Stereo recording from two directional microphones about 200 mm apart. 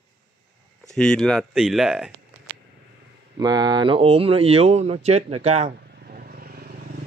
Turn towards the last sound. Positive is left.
turn(degrees=-50)  # may be behind; listen again after turning